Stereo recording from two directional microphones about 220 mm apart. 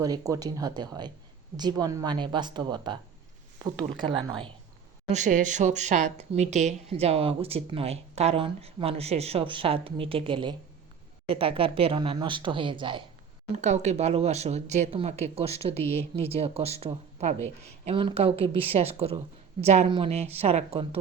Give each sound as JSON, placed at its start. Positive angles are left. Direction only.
{"t": 0.0, "sound": "speech", "side_deg": -15}
{"t": 5.1, "sound": "speech", "side_deg": -35}